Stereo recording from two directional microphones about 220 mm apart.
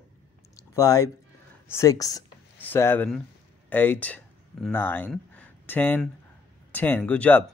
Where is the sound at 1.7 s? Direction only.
15° left (ahead or behind).